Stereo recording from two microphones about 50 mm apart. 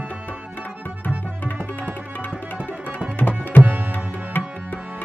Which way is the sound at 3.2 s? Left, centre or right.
Left.